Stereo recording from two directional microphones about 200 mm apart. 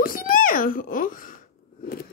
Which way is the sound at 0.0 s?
45° left (ahead or behind).